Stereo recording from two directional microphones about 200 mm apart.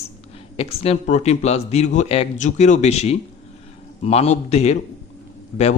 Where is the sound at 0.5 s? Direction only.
30° left (ahead or behind).